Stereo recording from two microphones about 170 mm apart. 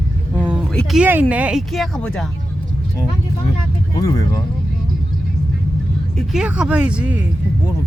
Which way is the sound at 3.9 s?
20° left (ahead or behind).